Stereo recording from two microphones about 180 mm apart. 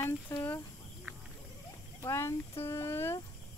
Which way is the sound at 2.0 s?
15° left (ahead or behind).